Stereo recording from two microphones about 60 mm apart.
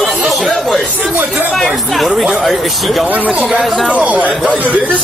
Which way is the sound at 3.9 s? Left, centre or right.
Right.